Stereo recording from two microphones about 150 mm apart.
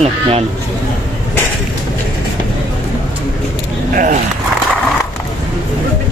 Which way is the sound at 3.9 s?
65° right (ahead or behind).